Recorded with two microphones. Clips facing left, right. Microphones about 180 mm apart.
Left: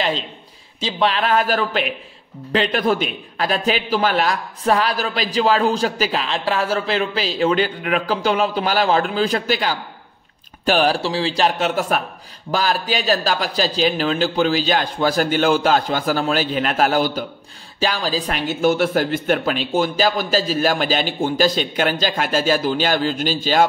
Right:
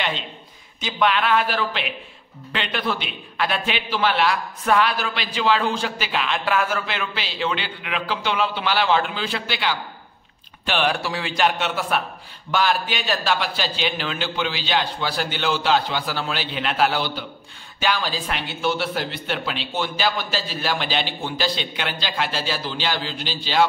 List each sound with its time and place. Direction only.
0.7 s a man's voice: 30° left (ahead or behind)
11.0 s a man's voice: 30° left (ahead or behind); by 23.6 s 45° left (ahead or behind)